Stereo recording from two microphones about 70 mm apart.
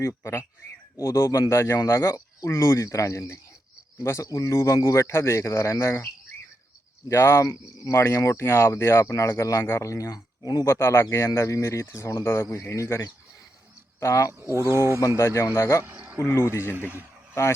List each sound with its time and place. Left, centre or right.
0.0 s speech: left
7.1 s speech: left
10.7 s speech: left
14.0 s speech: left
14.3 s speech: right
15.2 s speech: left
15.9 s a sound: right
16.2 s speech: left